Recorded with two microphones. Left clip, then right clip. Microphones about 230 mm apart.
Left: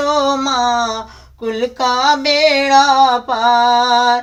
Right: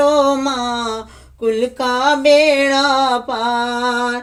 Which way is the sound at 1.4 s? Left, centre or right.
Left.